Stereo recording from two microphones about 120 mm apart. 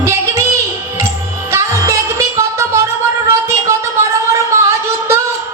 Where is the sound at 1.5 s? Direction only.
25° right (ahead or behind).